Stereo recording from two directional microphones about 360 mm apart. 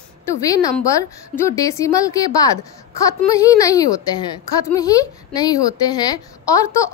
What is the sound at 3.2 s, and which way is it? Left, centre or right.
A woman's voice, centre.